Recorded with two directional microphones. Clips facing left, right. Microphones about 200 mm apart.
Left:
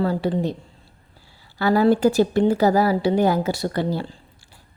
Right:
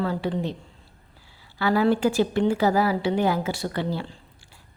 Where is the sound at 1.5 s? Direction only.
40° left (ahead or behind).